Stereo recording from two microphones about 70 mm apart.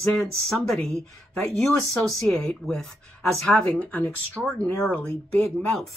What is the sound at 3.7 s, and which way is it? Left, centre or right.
Speech, left.